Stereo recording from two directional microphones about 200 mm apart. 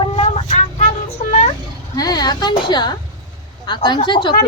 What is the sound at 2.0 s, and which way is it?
A woman's voice, 20° left (ahead or behind).